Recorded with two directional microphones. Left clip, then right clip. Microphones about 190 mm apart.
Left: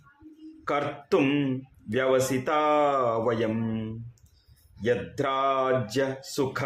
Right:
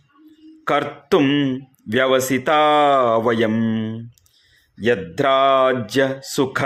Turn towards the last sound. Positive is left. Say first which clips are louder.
# right 8 dB
turn(degrees=-35)  # may be behind; listen again after turning